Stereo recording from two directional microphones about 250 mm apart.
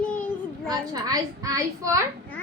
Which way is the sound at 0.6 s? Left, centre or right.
Centre.